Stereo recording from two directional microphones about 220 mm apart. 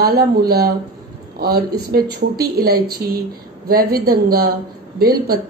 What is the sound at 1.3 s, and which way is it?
A woman's voice, 45° right (ahead or behind).